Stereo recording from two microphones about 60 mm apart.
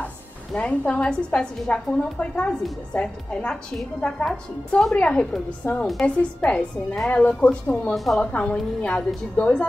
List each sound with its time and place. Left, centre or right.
0.6 s a woman's voice: left
5.6 s a woman's voice: left
5.9 s a woman's voice: centre
7.9 s a woman's voice: centre
8.2 s a woman's voice: left